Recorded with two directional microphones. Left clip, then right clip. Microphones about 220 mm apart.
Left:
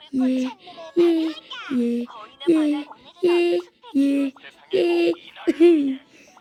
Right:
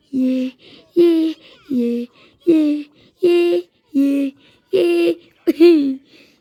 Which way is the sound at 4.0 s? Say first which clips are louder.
Right 3 dB; 10° right (ahead or behind).